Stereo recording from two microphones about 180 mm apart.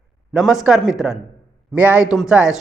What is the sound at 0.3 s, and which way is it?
A man's voice, centre (ahead or behind).